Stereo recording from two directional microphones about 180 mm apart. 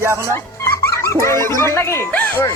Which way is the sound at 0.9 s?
15° left (ahead or behind).